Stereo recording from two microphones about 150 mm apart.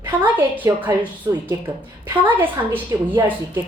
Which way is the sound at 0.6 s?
10° right (ahead or behind).